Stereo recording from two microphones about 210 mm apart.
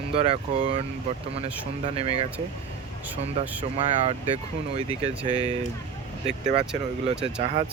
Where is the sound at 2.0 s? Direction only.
30° right (ahead or behind).